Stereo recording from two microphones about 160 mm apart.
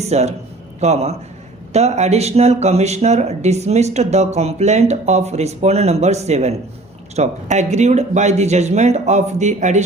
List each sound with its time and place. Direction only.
0.0 s a man's voice: 45° right (ahead or behind)